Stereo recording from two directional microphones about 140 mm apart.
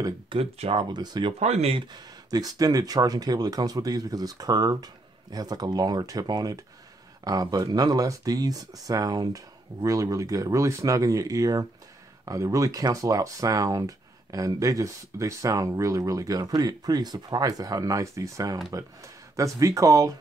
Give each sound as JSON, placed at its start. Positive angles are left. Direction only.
{"t": 0.0, "sound": "speech", "side_deg": -40}
{"t": 0.9, "sound": "speech", "side_deg": -30}
{"t": 1.4, "sound": "speech", "side_deg": -50}